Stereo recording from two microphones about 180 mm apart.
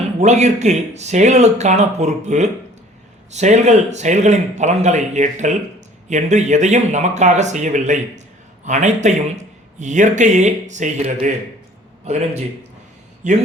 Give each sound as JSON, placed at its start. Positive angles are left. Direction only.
{"t": 0.2, "sound": "speech", "side_deg": -40}